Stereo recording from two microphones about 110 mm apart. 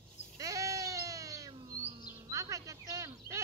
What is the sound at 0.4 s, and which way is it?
Sheep, 30° right (ahead or behind).